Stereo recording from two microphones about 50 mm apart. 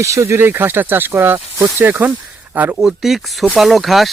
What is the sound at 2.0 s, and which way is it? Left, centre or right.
Speech, right.